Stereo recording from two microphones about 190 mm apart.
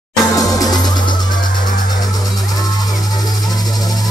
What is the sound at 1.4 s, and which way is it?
Music, 45° left (ahead or behind).